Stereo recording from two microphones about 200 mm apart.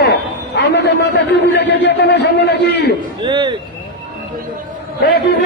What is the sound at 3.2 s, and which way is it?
Speech, 25° right (ahead or behind).